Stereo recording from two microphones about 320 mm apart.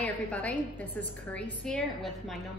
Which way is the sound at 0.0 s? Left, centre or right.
Centre.